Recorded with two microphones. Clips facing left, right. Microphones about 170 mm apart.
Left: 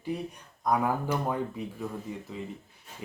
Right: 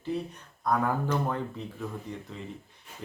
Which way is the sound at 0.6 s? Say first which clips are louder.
Even; 10° left (ahead or behind).